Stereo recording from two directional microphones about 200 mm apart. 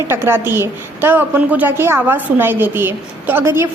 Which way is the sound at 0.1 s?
10° right (ahead or behind).